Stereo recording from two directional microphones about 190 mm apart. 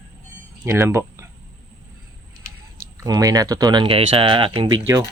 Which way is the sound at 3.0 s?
20° right (ahead or behind).